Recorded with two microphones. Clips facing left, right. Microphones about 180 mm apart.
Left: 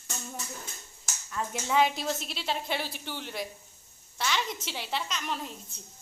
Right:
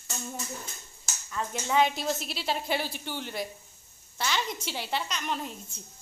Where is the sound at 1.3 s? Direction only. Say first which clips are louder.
Right 1 dB; centre (ahead or behind).